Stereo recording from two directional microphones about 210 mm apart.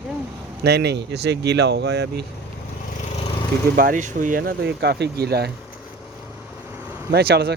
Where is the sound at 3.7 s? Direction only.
40° right (ahead or behind).